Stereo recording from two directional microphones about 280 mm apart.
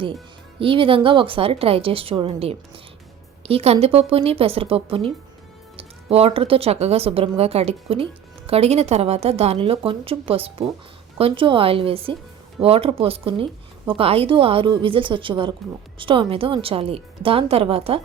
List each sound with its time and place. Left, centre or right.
0.6 s speech: centre